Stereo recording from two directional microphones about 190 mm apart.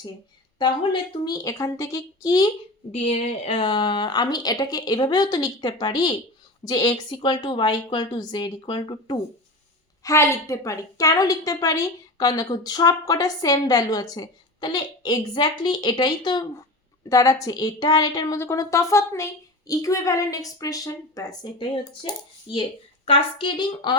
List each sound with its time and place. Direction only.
0.6 s a woman's voice: 25° left (ahead or behind)
3.1 s a woman's voice: 35° left (ahead or behind)